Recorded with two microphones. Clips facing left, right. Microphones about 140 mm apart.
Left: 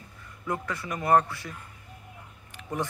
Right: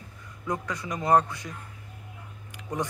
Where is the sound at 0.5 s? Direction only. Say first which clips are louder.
Even; 20° right (ahead or behind).